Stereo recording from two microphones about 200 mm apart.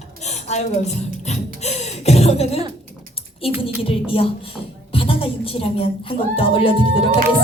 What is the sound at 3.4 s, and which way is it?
A woman's voice, 30° left (ahead or behind).